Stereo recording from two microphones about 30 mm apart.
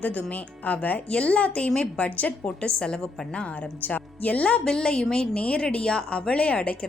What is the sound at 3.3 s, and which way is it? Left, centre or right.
Speech, left.